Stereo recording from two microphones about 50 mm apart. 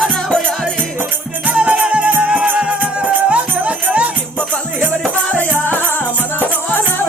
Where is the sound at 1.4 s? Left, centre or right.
Right.